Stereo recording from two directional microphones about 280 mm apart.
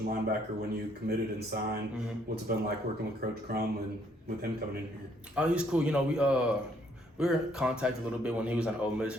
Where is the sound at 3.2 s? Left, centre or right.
Right.